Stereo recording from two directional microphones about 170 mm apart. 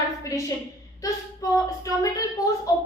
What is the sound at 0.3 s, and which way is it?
Speech, 20° left (ahead or behind).